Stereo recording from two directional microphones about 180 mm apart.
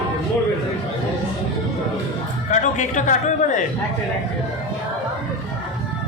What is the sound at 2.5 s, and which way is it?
A man's voice, 45° left (ahead or behind).